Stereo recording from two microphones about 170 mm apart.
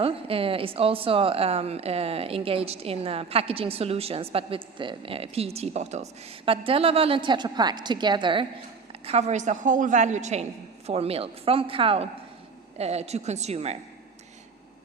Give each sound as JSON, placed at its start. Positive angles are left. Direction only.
{"t": 0.0, "sound": "a woman's voice", "side_deg": -35}